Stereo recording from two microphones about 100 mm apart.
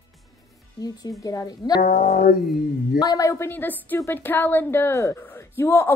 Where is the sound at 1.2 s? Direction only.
35° left (ahead or behind).